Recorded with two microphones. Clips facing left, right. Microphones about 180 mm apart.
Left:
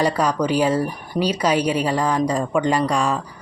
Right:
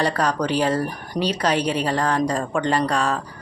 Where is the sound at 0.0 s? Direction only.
10° left (ahead or behind).